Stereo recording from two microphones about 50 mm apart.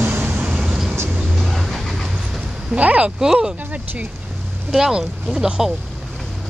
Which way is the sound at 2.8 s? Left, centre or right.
Right.